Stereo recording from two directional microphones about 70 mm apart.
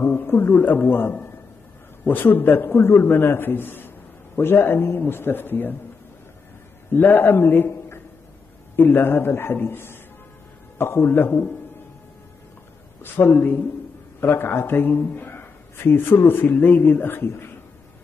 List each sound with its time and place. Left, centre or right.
0.0 s a man's voice: left
6.9 s a man's voice: left
13.0 s a man's voice: left